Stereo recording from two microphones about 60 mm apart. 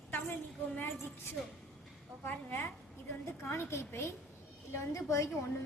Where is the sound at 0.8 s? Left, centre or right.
Left.